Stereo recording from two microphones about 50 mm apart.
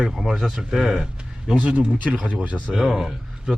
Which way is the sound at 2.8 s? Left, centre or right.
Centre.